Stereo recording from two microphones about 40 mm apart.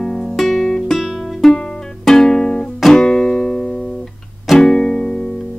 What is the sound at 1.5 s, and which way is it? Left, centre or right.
Music, centre.